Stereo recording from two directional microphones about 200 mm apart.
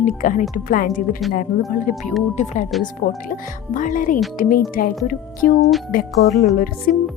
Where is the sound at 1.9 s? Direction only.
40° left (ahead or behind).